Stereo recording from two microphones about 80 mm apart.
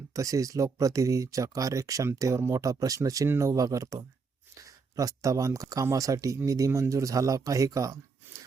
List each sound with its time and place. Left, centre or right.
0.1 s speech: right